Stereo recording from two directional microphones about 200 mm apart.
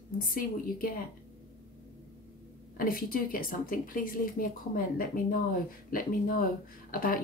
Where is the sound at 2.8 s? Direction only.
45° left (ahead or behind).